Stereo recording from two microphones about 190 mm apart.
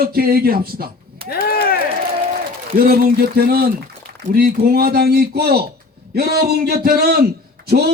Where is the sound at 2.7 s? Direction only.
50° right (ahead or behind).